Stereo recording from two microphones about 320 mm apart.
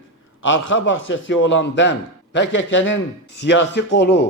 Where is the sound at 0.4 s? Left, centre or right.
Left.